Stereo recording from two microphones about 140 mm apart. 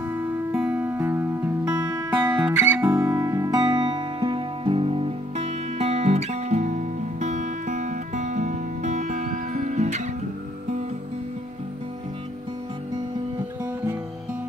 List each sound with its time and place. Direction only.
0.0 s music: 15° right (ahead or behind); by 10.0 s 55° right (ahead or behind)